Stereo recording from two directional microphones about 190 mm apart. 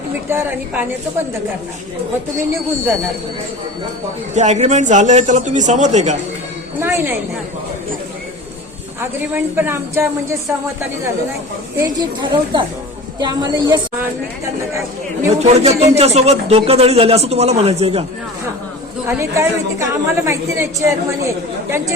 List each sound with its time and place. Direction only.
0.3 s a woman's voice: 10° right (ahead or behind)
4.4 s speech: 35° right (ahead or behind)
6.7 s a woman's voice: 10° right (ahead or behind)
9.0 s a woman's voice: 10° right (ahead or behind)
11.8 s a woman's voice: 20° right (ahead or behind)
15.3 s speech: 35° right (ahead or behind)
19.0 s a woman's voice: 15° right (ahead or behind)